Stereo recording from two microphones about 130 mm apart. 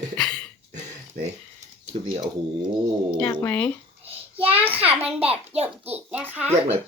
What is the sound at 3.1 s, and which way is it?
Speech, 10° left (ahead or behind).